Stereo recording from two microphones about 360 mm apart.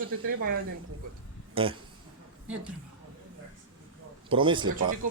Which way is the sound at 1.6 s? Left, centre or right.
Centre.